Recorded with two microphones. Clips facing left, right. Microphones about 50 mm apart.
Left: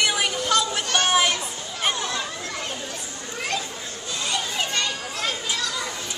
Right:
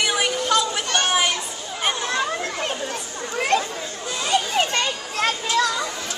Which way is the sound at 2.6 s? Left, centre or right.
Right.